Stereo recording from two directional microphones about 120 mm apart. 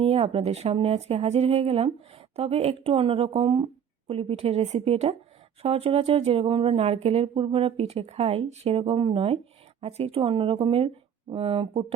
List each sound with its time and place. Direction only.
0.0 s speech: 55° right (ahead or behind)